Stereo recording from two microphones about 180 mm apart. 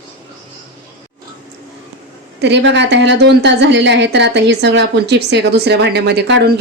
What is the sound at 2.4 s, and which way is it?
A woman's voice, 80° right.